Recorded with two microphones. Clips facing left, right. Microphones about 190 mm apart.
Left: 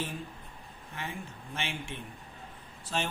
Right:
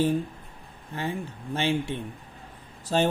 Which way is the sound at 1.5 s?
35° right (ahead or behind).